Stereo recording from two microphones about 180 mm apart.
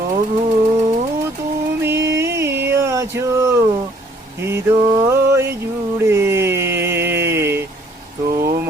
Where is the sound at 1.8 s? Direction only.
15° right (ahead or behind).